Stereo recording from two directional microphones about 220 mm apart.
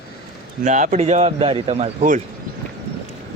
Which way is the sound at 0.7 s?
30° right (ahead or behind).